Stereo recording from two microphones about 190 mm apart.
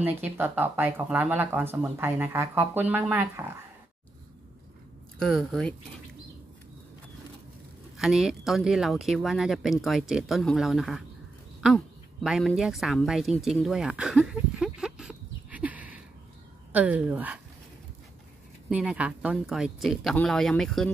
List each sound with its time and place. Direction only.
0.0 s speech: 10° right (ahead or behind)
5.2 s speech: centre (ahead or behind)
8.0 s speech: centre (ahead or behind)
11.6 s a sound: centre (ahead or behind)
16.7 s speech: 10° right (ahead or behind)
18.7 s speech: 5° right (ahead or behind)